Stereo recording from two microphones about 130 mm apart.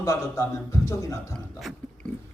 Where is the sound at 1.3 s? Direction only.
Centre (ahead or behind).